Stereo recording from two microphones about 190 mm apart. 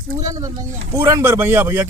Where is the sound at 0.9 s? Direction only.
15° right (ahead or behind).